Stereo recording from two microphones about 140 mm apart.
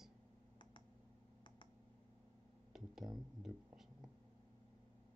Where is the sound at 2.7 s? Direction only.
Centre (ahead or behind).